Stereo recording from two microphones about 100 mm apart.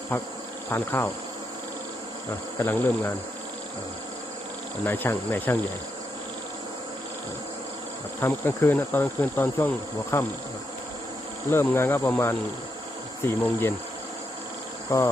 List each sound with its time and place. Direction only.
0.1 s insect: 25° left (ahead or behind)
2.6 s insect: 20° left (ahead or behind)
4.9 s insect: 20° left (ahead or behind)
8.2 s insect: 20° left (ahead or behind)
11.6 s insect: 20° left (ahead or behind)
14.8 s insect: 30° left (ahead or behind)